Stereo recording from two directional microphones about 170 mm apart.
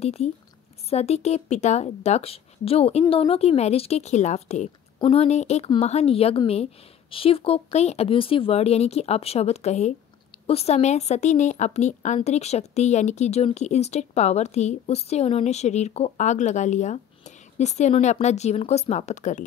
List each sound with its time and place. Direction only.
0.0 s a woman's voice: 40° left (ahead or behind)